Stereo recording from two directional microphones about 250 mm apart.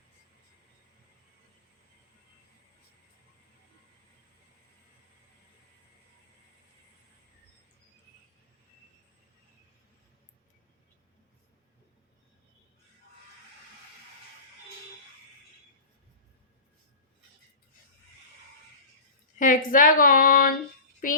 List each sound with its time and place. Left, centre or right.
19.4 s speech: left